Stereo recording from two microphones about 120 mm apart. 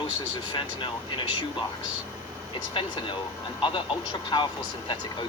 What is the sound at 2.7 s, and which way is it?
Speech, 45° left (ahead or behind).